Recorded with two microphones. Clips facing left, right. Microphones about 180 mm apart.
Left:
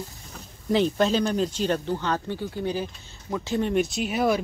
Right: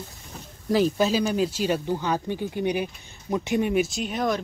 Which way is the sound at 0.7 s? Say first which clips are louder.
Even; 5° right (ahead or behind).